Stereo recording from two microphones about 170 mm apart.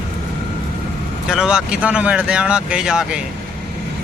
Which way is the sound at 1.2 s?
5° right (ahead or behind).